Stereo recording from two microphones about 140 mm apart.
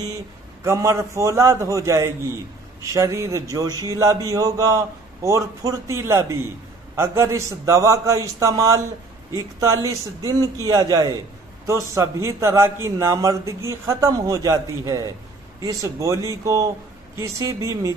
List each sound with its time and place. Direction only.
0.7 s a man's voice: 20° right (ahead or behind)